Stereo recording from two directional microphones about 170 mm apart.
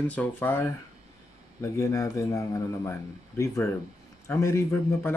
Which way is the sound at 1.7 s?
20° left (ahead or behind).